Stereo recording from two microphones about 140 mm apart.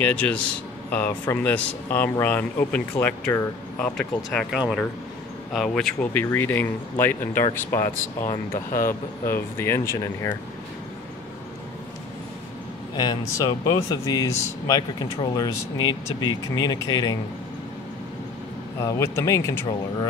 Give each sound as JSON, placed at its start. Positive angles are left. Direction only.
{"t": 0.0, "sound": "speech", "side_deg": 10}
{"t": 6.2, "sound": "speech", "side_deg": 15}
{"t": 8.8, "sound": "speech", "side_deg": 15}
{"t": 12.9, "sound": "speech", "side_deg": 30}
{"t": 18.9, "sound": "speech", "side_deg": 20}